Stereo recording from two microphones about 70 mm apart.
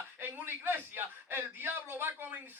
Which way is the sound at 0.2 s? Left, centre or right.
Right.